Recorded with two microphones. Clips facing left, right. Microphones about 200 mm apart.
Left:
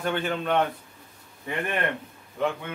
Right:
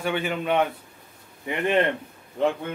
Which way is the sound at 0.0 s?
10° right (ahead or behind).